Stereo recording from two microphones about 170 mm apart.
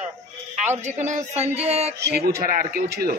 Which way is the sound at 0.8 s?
45° right (ahead or behind).